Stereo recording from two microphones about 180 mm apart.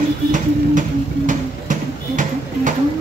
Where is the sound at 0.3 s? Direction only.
45° right (ahead or behind).